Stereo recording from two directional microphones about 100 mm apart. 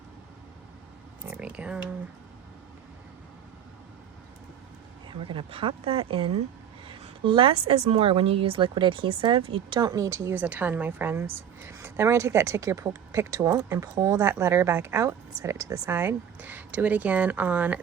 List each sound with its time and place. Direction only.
1.3 s speech: 10° right (ahead or behind)
5.0 s a woman's voice: 60° right (ahead or behind)
9.9 s a woman's voice: 35° right (ahead or behind)
10.3 s a woman's voice: 15° right (ahead or behind); by 15.9 s 35° right (ahead or behind)
15.9 s speech: 20° right (ahead or behind)